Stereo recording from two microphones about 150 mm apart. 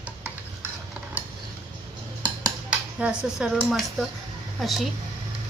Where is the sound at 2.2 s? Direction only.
25° right (ahead or behind).